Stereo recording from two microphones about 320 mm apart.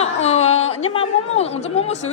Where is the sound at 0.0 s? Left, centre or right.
Centre.